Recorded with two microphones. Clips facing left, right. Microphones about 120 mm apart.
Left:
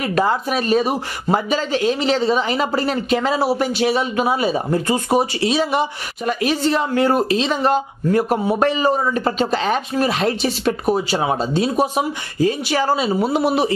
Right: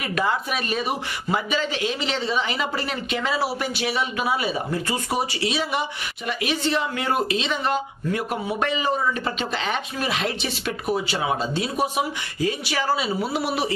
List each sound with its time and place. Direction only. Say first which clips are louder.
0.0 s speech: left 6 dB; 35° left (ahead or behind)
13.4 s speech: left 7 dB; 25° left (ahead or behind)